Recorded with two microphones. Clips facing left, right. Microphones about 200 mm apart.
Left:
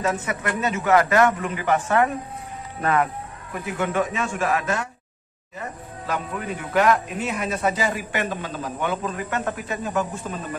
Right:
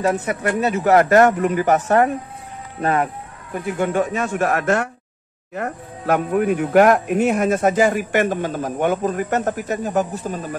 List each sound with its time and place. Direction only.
0.0 s a man's voice: 35° right (ahead or behind)
2.8 s a man's voice: 30° right (ahead or behind)
4.1 s a man's voice: 55° right (ahead or behind)